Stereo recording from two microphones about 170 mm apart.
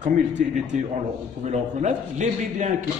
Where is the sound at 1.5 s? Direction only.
45° right (ahead or behind).